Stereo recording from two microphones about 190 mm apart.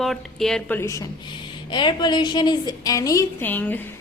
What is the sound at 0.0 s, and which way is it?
Speech, centre (ahead or behind).